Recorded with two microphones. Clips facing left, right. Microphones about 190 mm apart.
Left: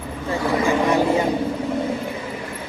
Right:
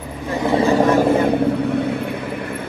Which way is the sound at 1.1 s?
60° right (ahead or behind).